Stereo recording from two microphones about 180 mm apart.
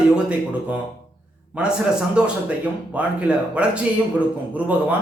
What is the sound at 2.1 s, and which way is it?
A man's voice, 5° right (ahead or behind).